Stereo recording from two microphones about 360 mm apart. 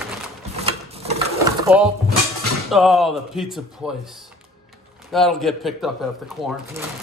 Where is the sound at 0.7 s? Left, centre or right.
Centre.